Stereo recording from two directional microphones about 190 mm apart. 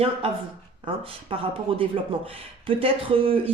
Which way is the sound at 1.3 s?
30° right (ahead or behind).